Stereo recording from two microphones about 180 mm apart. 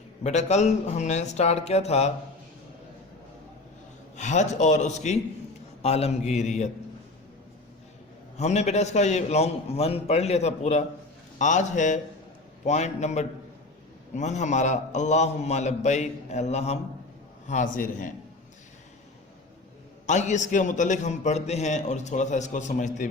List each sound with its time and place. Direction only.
0.2 s a man's voice: 40° left (ahead or behind)
4.2 s a man's voice: 40° left (ahead or behind)
8.4 s a man's voice: 40° left (ahead or behind)
20.1 s a man's voice: 40° left (ahead or behind)